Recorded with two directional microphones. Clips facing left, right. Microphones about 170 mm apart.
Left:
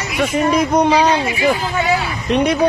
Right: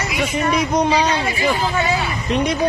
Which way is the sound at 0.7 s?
65° left (ahead or behind).